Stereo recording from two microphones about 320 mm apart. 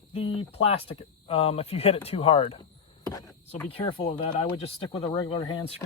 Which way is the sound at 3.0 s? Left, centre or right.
Centre.